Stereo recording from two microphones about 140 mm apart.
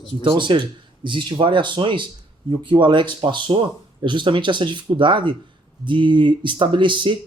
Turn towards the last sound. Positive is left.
turn(degrees=-35)  # may be behind; listen again after turning